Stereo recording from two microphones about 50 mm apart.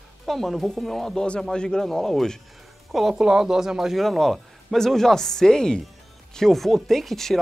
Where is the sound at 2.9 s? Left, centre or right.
Centre.